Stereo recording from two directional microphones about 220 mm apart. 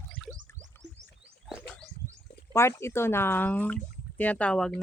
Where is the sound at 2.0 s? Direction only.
35° left (ahead or behind).